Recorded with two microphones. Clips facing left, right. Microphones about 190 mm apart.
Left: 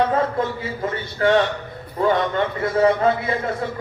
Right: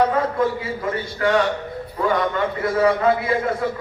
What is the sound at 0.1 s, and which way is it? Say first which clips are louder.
A man's voice: right 1 dB; 25° left (ahead or behind).